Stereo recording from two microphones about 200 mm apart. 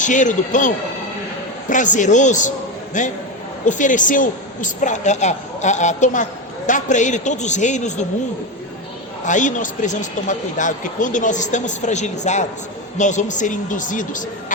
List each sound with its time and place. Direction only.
0.0 s a man's voice: 40° left (ahead or behind)
1.7 s a man's voice: 40° left (ahead or behind)
9.2 s a man's voice: 40° left (ahead or behind)